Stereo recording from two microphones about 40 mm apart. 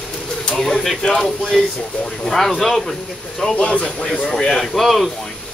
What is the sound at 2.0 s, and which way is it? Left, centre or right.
Speech, centre.